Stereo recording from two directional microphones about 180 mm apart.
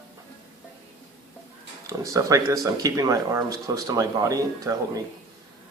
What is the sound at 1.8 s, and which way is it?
Speech, 20° right (ahead or behind).